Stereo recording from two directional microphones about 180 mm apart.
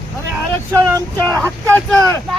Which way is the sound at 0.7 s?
15° right (ahead or behind).